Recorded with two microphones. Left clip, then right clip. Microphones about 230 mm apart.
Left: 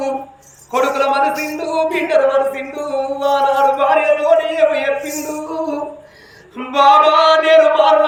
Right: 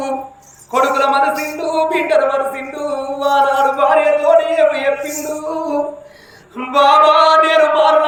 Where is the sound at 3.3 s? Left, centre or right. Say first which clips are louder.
Right 1 dB; centre.